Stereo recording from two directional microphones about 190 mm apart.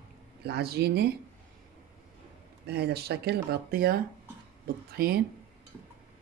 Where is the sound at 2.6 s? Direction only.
60° right (ahead or behind).